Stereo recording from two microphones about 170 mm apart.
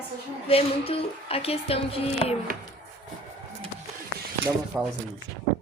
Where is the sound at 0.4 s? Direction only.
35° left (ahead or behind).